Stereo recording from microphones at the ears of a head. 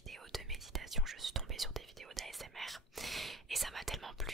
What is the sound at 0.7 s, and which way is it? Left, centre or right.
Whispering, right.